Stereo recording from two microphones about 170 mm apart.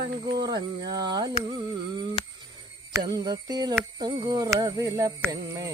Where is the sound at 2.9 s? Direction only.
25° right (ahead or behind).